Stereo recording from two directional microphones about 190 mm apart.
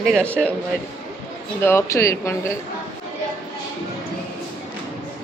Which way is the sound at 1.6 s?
15° left (ahead or behind).